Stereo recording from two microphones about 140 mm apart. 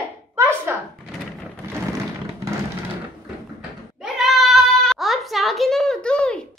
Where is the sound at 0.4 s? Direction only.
15° right (ahead or behind).